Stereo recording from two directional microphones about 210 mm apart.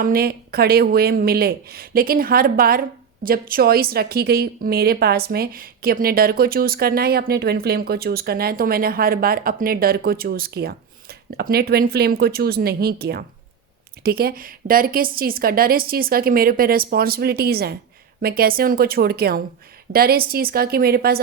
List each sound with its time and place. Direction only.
0.0 s a woman's voice: 45° right (ahead or behind)